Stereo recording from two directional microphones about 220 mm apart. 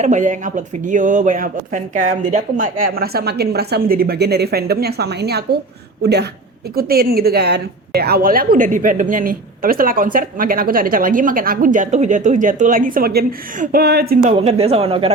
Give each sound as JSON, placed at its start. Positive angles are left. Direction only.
{"t": 0.0, "sound": "a woman's voice", "side_deg": -35}
{"t": 14.3, "sound": "speech", "side_deg": -30}